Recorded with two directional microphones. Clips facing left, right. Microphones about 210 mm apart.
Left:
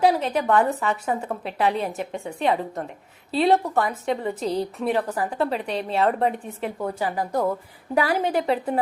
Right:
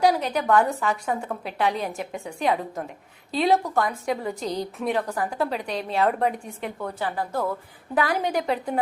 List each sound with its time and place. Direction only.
0.0 s a woman's voice: centre (ahead or behind)
4.4 s a woman's voice: 30° left (ahead or behind)
4.8 s a woman's voice: centre (ahead or behind)